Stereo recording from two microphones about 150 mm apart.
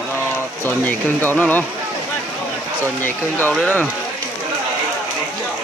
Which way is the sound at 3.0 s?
10° left (ahead or behind).